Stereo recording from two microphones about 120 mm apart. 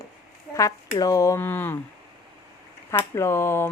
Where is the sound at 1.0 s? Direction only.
30° left (ahead or behind).